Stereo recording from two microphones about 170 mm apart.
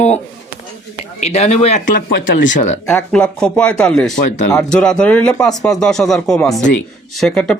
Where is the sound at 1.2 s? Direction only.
40° left (ahead or behind).